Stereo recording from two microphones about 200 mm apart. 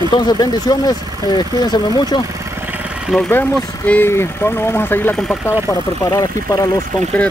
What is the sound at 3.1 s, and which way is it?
Speech, 5° left (ahead or behind).